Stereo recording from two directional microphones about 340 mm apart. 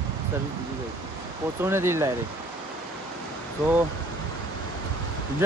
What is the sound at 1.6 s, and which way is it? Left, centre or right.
Speech, centre.